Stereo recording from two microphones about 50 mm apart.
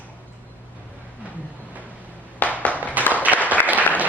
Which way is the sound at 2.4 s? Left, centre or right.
Left.